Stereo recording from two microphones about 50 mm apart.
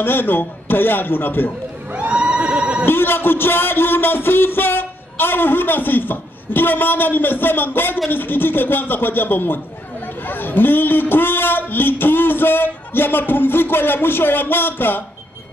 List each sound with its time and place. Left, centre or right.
0.0 s speech: left
1.9 s a sound: right
2.8 s speech: left